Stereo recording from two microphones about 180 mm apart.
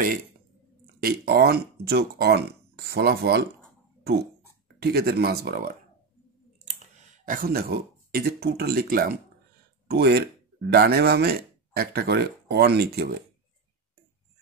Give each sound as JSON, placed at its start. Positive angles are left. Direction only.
{"t": 1.0, "sound": "speech", "side_deg": -60}
{"t": 4.7, "sound": "speech", "side_deg": -60}
{"t": 7.2, "sound": "speech", "side_deg": -50}